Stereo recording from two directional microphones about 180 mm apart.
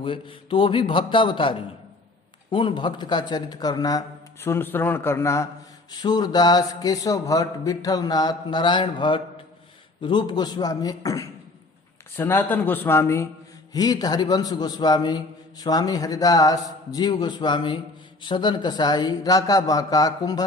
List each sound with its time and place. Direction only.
0.0 s speech: 30° left (ahead or behind)